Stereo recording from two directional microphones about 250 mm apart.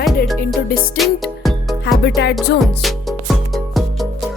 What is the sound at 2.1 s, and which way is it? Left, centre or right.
Music, left.